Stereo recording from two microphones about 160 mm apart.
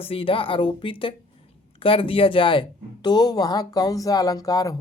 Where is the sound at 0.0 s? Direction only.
35° left (ahead or behind).